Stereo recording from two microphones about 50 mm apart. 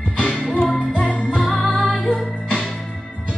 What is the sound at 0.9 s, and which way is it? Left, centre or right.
Music, right.